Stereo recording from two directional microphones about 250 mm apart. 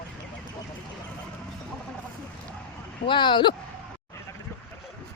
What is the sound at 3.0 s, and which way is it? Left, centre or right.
Speech, centre.